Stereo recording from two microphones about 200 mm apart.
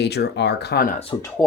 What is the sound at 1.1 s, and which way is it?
Speech, 25° left (ahead or behind).